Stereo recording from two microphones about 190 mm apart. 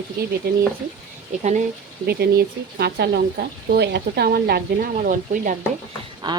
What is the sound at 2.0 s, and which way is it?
Speech, 55° right (ahead or behind).